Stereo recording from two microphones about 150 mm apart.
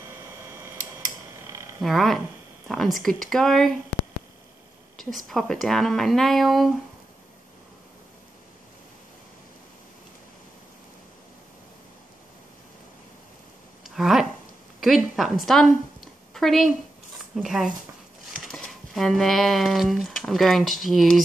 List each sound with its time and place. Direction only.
1.8 s speech: centre (ahead or behind)
4.9 s speech: centre (ahead or behind)
13.8 s a sound: centre (ahead or behind)
17.2 s speech: centre (ahead or behind)